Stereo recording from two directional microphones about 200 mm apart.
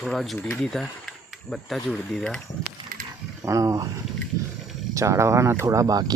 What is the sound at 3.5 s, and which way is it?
Speech, 15° right (ahead or behind).